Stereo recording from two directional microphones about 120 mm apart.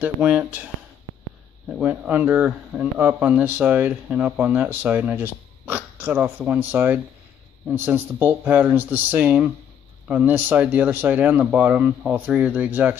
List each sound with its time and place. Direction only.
0.0 s speech: 10° right (ahead or behind)
1.8 s speech: 10° right (ahead or behind)